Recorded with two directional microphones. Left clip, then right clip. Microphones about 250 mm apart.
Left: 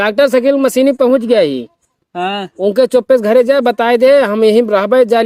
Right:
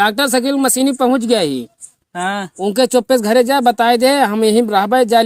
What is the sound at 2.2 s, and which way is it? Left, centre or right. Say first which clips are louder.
Speech: left 2 dB; right.